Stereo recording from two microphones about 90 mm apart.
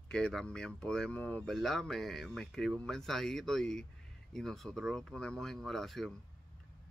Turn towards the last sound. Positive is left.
turn(degrees=0)  # may be behind; listen again after turning